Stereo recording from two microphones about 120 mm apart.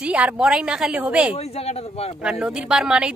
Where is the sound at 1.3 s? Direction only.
55° left (ahead or behind).